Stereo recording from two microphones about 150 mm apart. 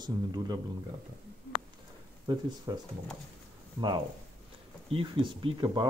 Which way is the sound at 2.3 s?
30° right (ahead or behind).